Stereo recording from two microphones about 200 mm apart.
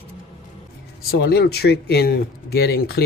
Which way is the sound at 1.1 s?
50° left (ahead or behind).